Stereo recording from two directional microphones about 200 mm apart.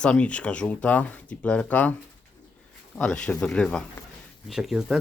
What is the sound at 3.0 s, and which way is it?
Speech, 5° left (ahead or behind).